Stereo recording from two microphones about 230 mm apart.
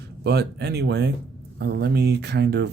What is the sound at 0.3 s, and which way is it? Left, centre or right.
Speech, right.